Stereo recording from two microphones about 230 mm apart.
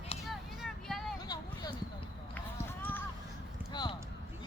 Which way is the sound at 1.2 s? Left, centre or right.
Centre.